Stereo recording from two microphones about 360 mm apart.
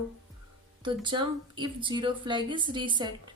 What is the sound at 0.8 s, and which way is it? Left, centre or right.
A woman's voice, centre.